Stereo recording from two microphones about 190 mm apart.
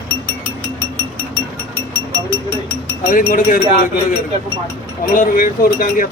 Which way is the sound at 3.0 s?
45° left (ahead or behind).